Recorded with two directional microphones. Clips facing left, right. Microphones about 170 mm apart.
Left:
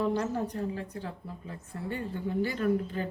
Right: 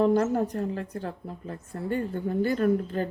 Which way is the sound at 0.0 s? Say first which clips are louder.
Right 7 dB; 50° right (ahead or behind).